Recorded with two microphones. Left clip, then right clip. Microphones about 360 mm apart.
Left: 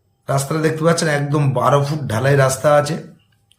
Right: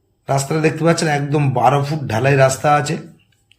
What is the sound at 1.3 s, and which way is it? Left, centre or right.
Speech, left.